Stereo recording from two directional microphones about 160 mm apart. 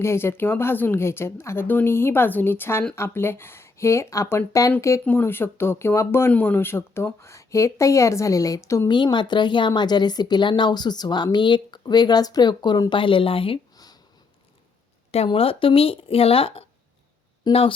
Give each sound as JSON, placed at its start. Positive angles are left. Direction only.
{"t": 0.0, "sound": "speech", "side_deg": 15}
{"t": 15.1, "sound": "speech", "side_deg": 40}
{"t": 17.5, "sound": "speech", "side_deg": 25}